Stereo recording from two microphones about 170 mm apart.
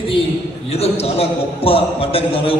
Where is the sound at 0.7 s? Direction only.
35° left (ahead or behind).